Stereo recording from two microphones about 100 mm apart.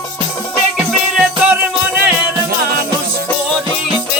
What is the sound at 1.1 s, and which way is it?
Music, 15° right (ahead or behind).